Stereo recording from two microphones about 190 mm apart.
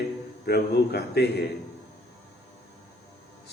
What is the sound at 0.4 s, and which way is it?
A man's voice, 60° left (ahead or behind).